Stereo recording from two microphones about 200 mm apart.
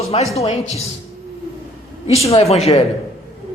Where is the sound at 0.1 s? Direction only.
30° left (ahead or behind).